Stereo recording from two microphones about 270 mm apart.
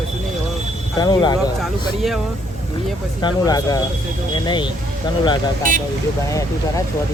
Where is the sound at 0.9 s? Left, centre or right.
Centre.